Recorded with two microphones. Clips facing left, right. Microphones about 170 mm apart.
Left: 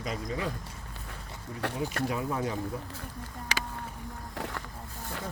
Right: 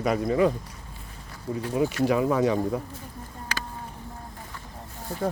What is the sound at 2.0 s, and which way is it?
Speech, 85° right.